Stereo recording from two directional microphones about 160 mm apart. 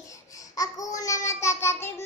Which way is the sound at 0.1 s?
20° left (ahead or behind).